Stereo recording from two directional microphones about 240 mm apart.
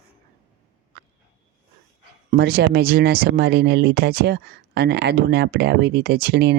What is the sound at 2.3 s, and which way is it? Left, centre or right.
Speech, right.